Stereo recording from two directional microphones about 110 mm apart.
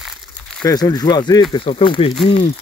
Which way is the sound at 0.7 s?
35° left (ahead or behind).